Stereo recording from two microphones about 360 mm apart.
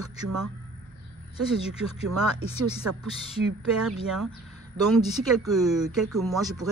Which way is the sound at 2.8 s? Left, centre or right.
Right.